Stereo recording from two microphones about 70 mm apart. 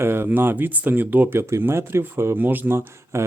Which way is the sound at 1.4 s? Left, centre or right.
Right.